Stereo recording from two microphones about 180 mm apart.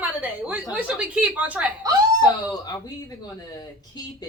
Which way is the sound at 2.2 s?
20° left (ahead or behind).